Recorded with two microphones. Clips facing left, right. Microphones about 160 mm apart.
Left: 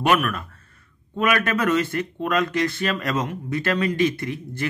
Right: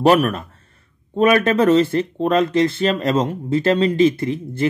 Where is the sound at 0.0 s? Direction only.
35° right (ahead or behind).